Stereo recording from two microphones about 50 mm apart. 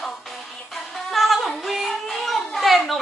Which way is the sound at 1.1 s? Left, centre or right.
Centre.